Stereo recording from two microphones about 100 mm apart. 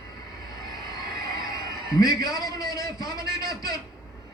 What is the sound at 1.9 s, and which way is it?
A man's voice, 40° left (ahead or behind).